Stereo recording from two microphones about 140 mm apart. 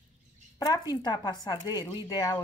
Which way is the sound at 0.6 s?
30° left (ahead or behind).